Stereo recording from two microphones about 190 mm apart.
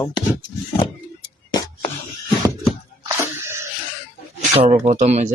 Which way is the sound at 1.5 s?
25° left (ahead or behind).